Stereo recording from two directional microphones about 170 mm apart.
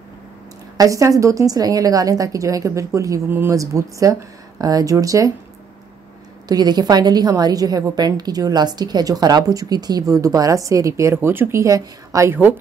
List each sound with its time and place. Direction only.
0.7 s a woman's voice: 20° right (ahead or behind)
6.5 s a woman's voice: 25° right (ahead or behind)